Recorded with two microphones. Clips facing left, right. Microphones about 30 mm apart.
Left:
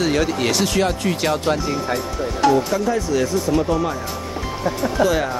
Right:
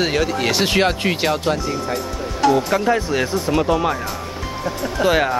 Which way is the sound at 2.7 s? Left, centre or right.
Right.